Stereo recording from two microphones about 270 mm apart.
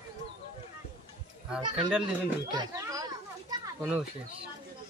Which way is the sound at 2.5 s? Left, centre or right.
Centre.